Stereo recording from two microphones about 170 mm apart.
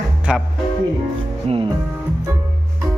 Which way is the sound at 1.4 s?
30° right (ahead or behind).